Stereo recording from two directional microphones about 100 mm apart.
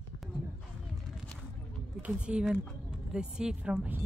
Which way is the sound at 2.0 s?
10° right (ahead or behind).